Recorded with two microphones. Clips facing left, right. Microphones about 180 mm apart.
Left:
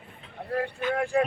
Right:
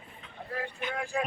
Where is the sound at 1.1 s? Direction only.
60° left (ahead or behind).